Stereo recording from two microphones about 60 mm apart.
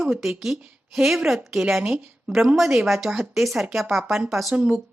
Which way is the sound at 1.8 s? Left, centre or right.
Centre.